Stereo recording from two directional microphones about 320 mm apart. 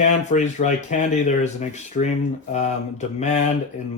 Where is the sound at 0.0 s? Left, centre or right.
Left.